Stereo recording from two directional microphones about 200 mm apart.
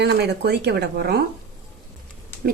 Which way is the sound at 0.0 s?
55° right (ahead or behind).